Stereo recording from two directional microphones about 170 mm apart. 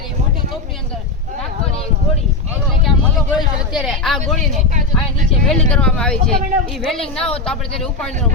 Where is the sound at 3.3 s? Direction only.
5° right (ahead or behind).